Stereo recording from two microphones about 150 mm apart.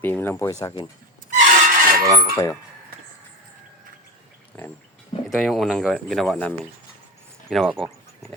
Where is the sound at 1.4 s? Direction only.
55° right (ahead or behind).